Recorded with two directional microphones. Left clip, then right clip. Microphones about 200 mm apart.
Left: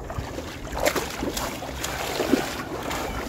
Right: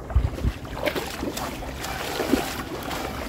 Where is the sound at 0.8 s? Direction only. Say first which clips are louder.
Left 3 dB; 15° left (ahead or behind).